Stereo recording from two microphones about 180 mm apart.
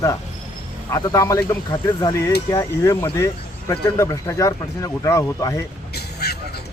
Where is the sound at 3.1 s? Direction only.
15° left (ahead or behind).